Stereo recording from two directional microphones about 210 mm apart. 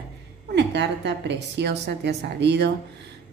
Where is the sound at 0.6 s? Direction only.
55° right (ahead or behind).